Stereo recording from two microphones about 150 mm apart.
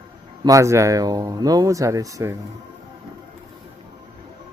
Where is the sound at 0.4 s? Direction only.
20° right (ahead or behind).